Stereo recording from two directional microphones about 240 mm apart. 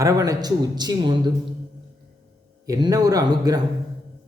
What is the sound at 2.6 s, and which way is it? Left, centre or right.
Speech, centre.